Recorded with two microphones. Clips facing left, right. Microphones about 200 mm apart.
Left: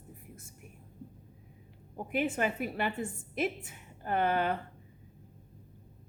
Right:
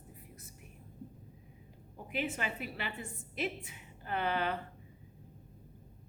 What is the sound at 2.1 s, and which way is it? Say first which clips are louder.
A woman's voice: left 6 dB; 50° left (ahead or behind).